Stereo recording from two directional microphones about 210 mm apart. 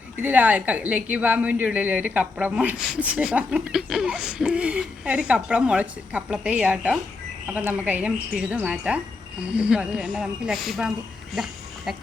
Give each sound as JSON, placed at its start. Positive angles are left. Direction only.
{"t": 0.2, "sound": "a woman's voice", "side_deg": -10}